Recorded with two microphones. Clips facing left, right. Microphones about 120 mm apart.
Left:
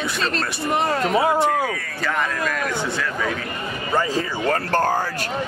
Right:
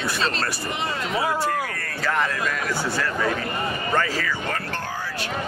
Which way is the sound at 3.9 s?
20° left (ahead or behind).